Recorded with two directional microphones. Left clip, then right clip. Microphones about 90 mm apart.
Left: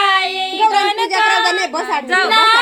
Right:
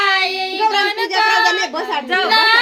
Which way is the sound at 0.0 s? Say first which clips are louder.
Left 1 dB; 20° left (ahead or behind).